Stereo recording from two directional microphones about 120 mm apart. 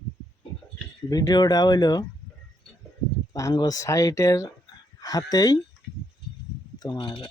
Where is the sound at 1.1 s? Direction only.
30° left (ahead or behind).